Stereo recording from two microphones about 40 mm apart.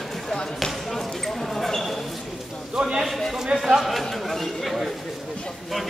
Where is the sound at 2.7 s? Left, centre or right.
Right.